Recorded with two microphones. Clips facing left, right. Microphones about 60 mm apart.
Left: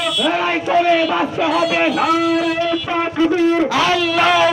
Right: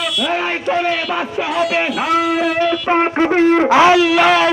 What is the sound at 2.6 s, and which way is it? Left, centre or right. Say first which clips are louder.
Speech: right 3 dB; right.